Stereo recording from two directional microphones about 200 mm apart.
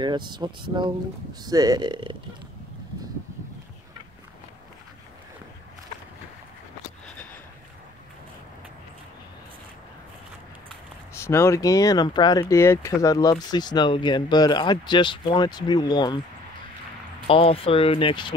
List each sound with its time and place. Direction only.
0.0 s speech: 20° right (ahead or behind)
11.1 s speech: 15° left (ahead or behind)
17.3 s speech: 30° left (ahead or behind)